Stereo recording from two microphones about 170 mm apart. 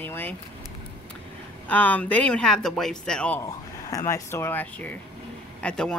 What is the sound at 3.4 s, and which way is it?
Speech, 20° left (ahead or behind).